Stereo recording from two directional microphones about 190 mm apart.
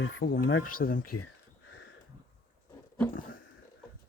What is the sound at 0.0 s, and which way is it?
Speech, 90° left.